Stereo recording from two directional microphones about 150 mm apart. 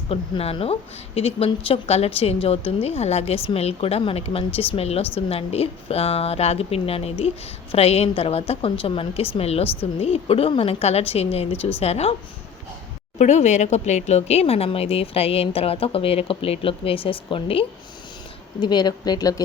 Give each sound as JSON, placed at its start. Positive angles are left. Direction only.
{"t": 0.1, "sound": "a woman's voice", "side_deg": 40}
{"t": 13.1, "sound": "a woman's voice", "side_deg": 50}